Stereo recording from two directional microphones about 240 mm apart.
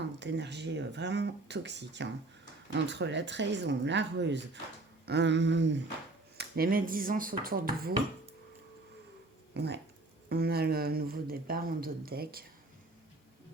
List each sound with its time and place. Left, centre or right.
0.0 s speech: right
9.6 s speech: right